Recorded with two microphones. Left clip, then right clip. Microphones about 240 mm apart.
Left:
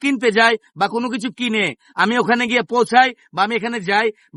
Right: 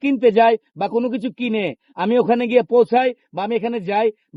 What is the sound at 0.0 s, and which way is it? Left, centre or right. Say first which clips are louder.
Speech: right 1 dB; left.